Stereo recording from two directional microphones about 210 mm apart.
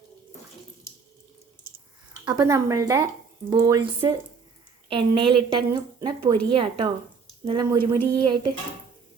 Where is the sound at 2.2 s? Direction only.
20° right (ahead or behind).